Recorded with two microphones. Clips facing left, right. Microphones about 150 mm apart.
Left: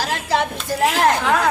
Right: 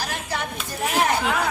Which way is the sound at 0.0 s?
90° left.